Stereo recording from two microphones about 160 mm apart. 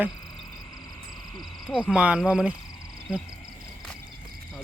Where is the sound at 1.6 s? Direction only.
5° right (ahead or behind).